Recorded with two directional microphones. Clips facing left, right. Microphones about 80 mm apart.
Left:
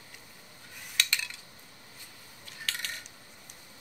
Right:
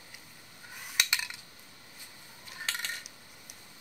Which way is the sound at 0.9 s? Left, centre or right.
Centre.